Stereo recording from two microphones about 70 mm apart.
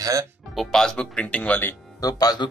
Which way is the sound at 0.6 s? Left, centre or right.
Centre.